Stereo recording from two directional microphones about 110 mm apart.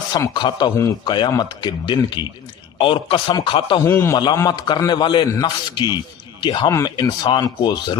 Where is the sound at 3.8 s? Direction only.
20° left (ahead or behind).